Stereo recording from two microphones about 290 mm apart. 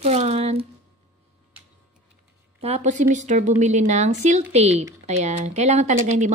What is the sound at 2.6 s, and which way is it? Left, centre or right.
A woman's voice, right.